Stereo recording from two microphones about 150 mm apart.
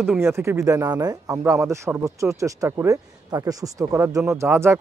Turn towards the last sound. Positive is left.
turn(degrees=-15)  # may be behind; listen again after turning